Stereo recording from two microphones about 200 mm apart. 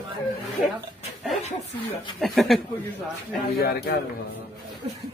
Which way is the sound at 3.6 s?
55° left (ahead or behind).